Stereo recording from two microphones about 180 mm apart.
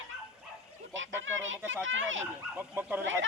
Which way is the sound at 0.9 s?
90° right.